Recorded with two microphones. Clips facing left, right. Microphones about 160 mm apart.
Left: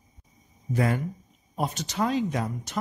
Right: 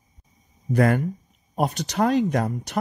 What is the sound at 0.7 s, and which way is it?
Speech, 60° right (ahead or behind).